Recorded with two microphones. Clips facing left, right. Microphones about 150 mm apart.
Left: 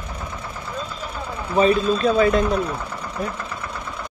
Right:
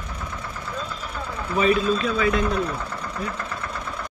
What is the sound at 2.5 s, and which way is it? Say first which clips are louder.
Engine: left 2 dB; 10° left (ahead or behind).